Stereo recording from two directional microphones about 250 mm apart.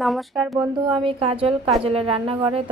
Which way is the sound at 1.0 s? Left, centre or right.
Right.